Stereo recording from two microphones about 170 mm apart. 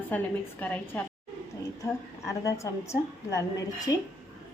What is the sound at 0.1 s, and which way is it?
A woman's voice, 10° left (ahead or behind).